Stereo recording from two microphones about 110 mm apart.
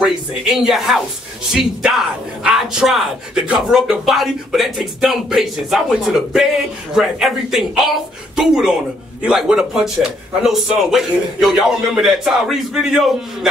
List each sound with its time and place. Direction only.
0.0 s a man's voice: 5° right (ahead or behind)